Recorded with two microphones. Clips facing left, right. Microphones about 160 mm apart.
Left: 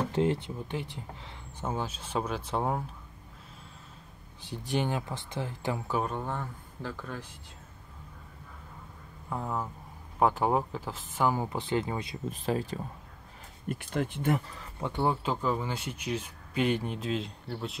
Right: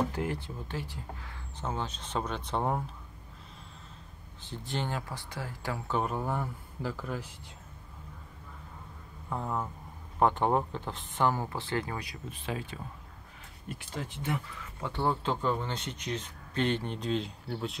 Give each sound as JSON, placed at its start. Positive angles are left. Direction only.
{"t": 0.1, "sound": "speech", "side_deg": 25}
{"t": 4.4, "sound": "speech", "side_deg": 15}
{"t": 6.0, "sound": "speech", "side_deg": -5}
{"t": 9.3, "sound": "speech", "side_deg": 0}
{"t": 11.3, "sound": "speech", "side_deg": 15}
{"t": 12.3, "sound": "speech", "side_deg": 40}
{"t": 13.7, "sound": "speech", "side_deg": 55}
{"t": 14.8, "sound": "speech", "side_deg": 15}